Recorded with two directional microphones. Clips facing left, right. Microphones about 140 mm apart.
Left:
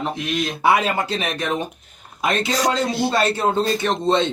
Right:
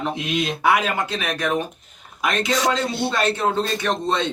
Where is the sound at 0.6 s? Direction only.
30° left (ahead or behind).